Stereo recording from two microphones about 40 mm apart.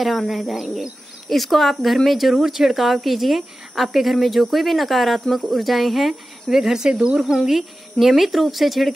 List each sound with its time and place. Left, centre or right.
0.0 s speech: centre
6.9 s speech: right
8.2 s speech: centre